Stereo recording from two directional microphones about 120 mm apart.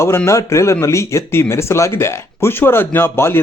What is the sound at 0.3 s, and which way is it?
Speech, 25° left (ahead or behind).